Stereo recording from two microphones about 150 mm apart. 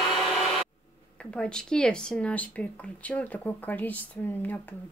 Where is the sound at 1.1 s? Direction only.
5° left (ahead or behind).